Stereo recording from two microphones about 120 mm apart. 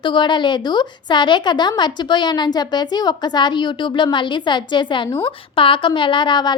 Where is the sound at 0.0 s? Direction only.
40° left (ahead or behind).